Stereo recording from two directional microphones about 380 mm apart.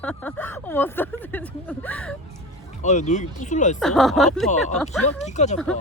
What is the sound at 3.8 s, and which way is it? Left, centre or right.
Speech, centre.